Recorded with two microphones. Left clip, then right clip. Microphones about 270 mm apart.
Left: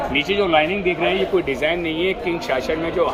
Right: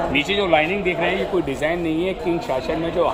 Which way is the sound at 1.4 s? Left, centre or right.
Right.